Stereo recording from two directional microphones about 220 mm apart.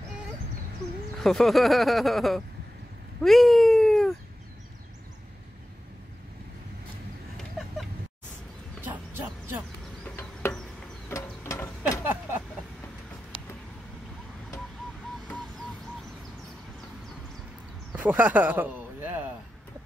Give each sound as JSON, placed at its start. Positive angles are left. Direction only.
{"t": 1.2, "sound": "speech", "side_deg": 0}
{"t": 3.2, "sound": "cat", "side_deg": 0}
{"t": 8.8, "sound": "bow-wow", "side_deg": -10}
{"t": 10.1, "sound": "insect", "side_deg": 10}
{"t": 11.1, "sound": "a sound", "side_deg": 15}
{"t": 12.0, "sound": "vehicle", "side_deg": -10}
{"t": 17.9, "sound": "a sound", "side_deg": -10}